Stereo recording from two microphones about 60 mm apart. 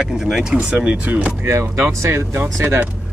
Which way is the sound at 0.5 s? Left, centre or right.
Right.